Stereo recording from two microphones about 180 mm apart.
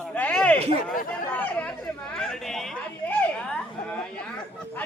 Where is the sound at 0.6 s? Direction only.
35° right (ahead or behind).